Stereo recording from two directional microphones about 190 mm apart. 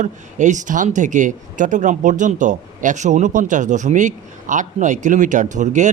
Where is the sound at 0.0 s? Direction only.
40° right (ahead or behind).